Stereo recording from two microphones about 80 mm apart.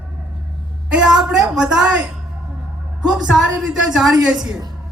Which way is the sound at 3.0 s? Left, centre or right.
Centre.